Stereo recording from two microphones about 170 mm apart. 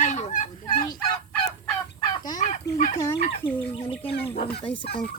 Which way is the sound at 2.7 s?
40° left (ahead or behind).